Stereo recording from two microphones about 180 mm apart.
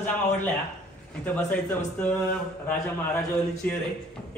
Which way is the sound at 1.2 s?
10° left (ahead or behind).